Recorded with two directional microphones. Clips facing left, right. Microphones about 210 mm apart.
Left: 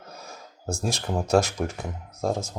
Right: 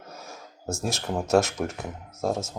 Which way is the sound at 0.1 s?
Centre (ahead or behind).